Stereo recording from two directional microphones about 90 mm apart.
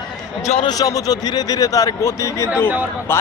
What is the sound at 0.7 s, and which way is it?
Speech, 45° left (ahead or behind).